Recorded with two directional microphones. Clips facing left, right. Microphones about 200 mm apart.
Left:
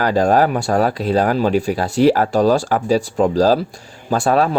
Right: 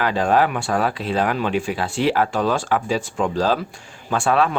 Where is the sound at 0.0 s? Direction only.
40° left (ahead or behind).